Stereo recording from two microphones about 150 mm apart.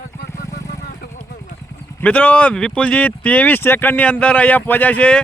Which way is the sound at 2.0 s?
10° left (ahead or behind).